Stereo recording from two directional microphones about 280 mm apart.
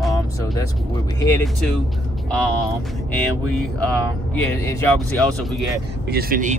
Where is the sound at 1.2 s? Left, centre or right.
Centre.